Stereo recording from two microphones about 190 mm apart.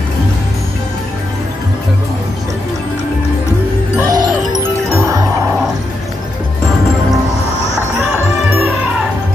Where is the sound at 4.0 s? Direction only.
20° right (ahead or behind).